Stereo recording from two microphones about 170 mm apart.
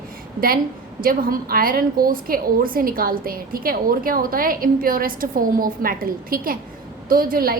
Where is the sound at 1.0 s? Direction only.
55° right (ahead or behind).